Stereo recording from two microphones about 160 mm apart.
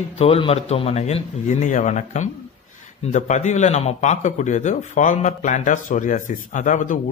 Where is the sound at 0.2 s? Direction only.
40° left (ahead or behind).